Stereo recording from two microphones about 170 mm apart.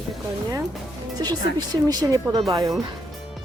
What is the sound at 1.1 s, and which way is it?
Speech, 25° right (ahead or behind).